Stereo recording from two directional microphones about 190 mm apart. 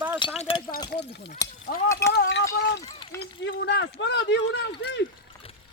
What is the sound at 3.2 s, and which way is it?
Speech, 65° left (ahead or behind).